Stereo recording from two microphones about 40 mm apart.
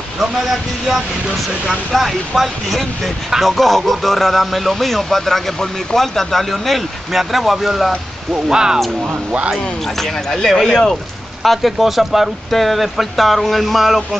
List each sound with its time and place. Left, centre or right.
0.2 s a sound: centre
2.0 s speech: centre
8.5 s speech: centre
9.9 s speech: centre
11.4 s speech: centre